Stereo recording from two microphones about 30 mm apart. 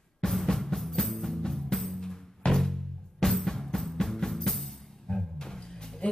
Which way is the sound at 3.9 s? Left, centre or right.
Centre.